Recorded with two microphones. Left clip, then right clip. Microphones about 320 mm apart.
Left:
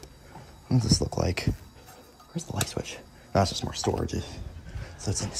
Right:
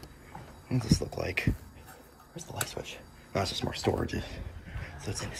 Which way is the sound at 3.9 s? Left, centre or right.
Centre.